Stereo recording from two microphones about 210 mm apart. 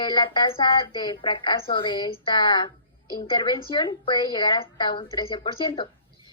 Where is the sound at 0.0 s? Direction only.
20° left (ahead or behind).